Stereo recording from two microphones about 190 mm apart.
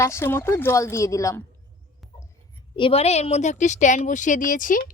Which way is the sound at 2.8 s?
30° left (ahead or behind).